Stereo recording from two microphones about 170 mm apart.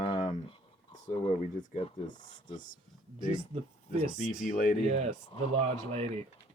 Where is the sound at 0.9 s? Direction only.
50° left (ahead or behind).